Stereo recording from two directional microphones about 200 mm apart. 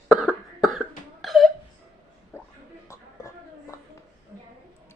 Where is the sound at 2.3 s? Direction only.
10° left (ahead or behind).